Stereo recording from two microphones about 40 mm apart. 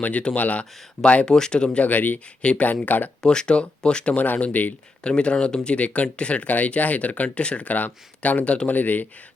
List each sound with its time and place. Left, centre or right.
0.0 s speech: left
1.2 s speech: centre
1.8 s speech: left
2.4 s speech: left
2.6 s speech: left
3.2 s speech: left
4.2 s speech: left
5.0 s speech: left